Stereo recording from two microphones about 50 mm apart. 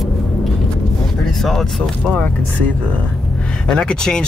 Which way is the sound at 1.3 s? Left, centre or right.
Centre.